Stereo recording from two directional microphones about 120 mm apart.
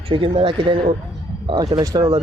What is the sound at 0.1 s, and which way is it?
Speech, 45° right (ahead or behind).